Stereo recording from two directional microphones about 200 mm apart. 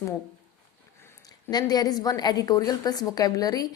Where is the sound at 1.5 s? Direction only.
20° left (ahead or behind).